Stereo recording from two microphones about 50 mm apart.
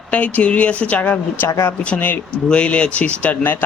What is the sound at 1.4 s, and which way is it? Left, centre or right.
Speech, left.